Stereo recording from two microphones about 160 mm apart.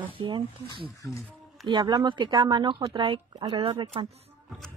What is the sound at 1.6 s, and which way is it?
Speech, 25° right (ahead or behind).